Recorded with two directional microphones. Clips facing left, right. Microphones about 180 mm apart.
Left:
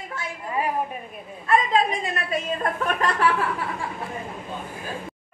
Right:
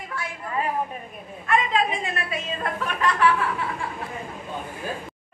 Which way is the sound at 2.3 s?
45° left (ahead or behind).